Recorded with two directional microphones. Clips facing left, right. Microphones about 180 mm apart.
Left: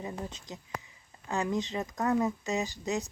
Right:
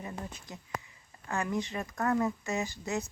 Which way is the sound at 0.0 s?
20° left (ahead or behind).